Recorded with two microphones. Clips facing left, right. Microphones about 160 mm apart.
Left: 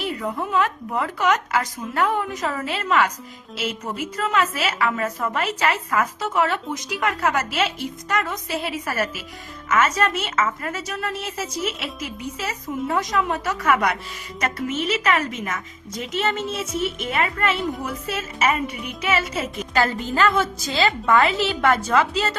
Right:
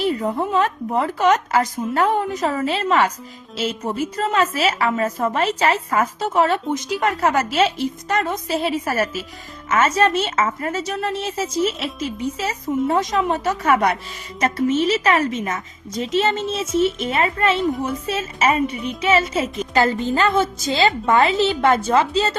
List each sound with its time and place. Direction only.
0.0 s a woman's voice: 30° right (ahead or behind)